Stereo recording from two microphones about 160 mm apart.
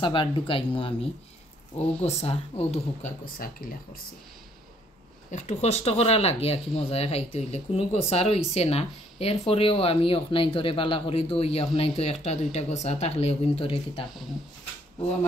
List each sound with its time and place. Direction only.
0.0 s speech: 30° left (ahead or behind)
2.0 s speech: 40° left (ahead or behind)
3.3 s speech: 65° left (ahead or behind)
5.3 s speech: 45° left (ahead or behind)